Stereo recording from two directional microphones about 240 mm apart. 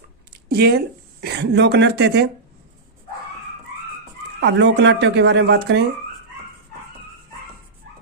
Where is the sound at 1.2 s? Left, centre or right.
Right.